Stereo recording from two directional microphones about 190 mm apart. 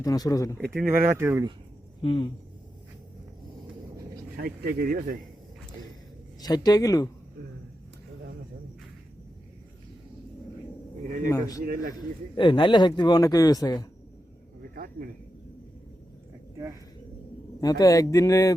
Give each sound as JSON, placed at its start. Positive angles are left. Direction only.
{"t": 0.0, "sound": "speech", "side_deg": 20}
{"t": 0.6, "sound": "speech", "side_deg": 0}
{"t": 1.0, "sound": "speech", "side_deg": -15}
{"t": 2.0, "sound": "speech", "side_deg": 25}
{"t": 4.4, "sound": "speech", "side_deg": -55}
{"t": 6.4, "sound": "speech", "side_deg": 20}
{"t": 11.3, "sound": "speech", "side_deg": 15}
{"t": 17.6, "sound": "speech", "side_deg": 20}